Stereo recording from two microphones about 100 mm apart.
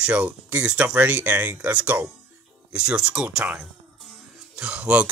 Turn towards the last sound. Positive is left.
turn(degrees=-10)  # may be behind; listen again after turning